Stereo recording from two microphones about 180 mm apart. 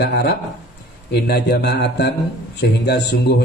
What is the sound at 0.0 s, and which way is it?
A man's voice, 65° left (ahead or behind).